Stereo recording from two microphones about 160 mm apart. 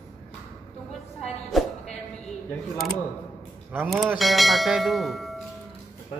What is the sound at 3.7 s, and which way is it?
Speech, 10° right (ahead or behind).